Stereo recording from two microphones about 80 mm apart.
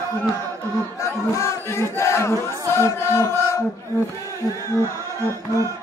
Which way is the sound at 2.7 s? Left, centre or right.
Left.